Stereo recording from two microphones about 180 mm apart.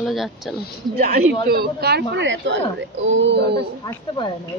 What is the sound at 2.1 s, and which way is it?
Speech, 80° right.